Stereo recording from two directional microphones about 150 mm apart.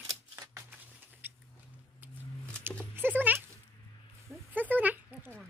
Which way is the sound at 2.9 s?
10° right (ahead or behind).